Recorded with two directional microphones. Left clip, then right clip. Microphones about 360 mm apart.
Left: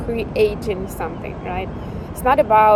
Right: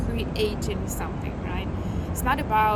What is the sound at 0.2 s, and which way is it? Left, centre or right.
Speech, centre.